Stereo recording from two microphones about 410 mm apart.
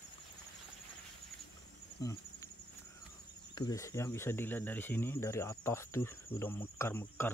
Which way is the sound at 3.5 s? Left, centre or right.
Centre.